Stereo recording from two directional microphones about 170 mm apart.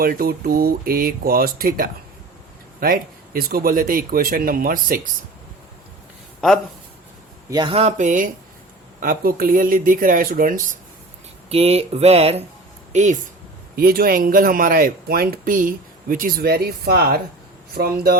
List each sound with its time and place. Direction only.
0.0 s speech: 60° right (ahead or behind)
6.4 s speech: centre (ahead or behind)
7.5 s speech: 30° right (ahead or behind); by 10.8 s 55° right (ahead or behind)
11.4 s speech: 35° right (ahead or behind)
13.7 s speech: 60° right (ahead or behind)